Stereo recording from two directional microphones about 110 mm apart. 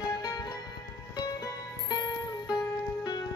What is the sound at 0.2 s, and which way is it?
Music, 35° left (ahead or behind).